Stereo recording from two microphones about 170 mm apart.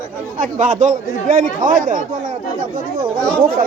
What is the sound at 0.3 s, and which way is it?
Speech, 50° right (ahead or behind).